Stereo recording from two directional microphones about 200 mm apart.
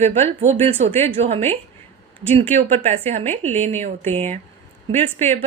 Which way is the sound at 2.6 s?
30° right (ahead or behind).